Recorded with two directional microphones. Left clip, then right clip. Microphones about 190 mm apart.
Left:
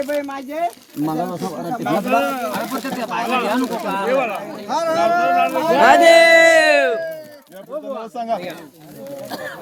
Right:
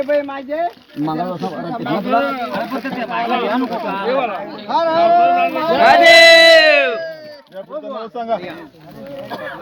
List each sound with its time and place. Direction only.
0.0 s speech: 20° left (ahead or behind)
1.0 s speech: 5° right (ahead or behind)
1.9 s speech: 5° left (ahead or behind); by 5.8 s 30° left (ahead or behind)
5.8 s a man's voice: 75° left (ahead or behind); by 7.2 s 55° left (ahead or behind)